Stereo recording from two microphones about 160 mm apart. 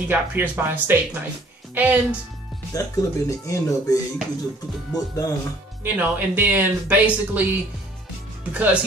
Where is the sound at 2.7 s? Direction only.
20° left (ahead or behind).